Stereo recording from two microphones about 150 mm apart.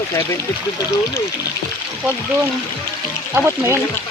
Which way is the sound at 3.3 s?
15° right (ahead or behind).